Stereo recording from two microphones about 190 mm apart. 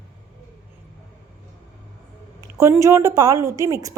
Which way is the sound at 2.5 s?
15° right (ahead or behind).